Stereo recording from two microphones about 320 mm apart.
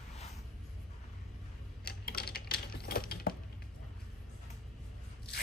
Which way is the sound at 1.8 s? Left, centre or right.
Left.